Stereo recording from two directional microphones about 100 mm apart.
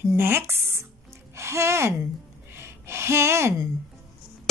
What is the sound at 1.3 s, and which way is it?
Speech, 30° right (ahead or behind).